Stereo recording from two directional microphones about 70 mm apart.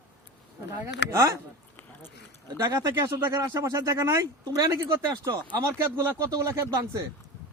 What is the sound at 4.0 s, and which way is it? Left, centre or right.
Speech, right.